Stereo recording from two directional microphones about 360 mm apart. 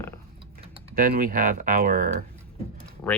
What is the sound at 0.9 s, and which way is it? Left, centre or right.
Speech, right.